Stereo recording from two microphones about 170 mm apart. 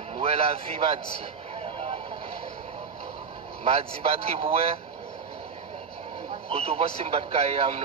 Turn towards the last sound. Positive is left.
turn(degrees=-35)  # may be behind; listen again after turning